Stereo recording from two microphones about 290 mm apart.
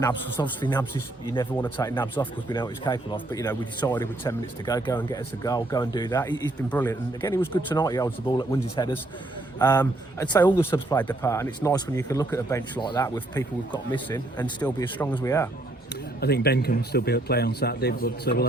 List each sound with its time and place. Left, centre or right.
0.0 s speech: centre
16.2 s speech: left